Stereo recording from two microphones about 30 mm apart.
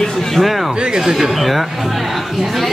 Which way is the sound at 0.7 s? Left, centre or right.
Right.